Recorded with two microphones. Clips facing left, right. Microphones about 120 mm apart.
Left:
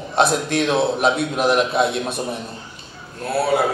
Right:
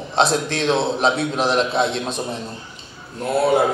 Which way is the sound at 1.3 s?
5° left (ahead or behind).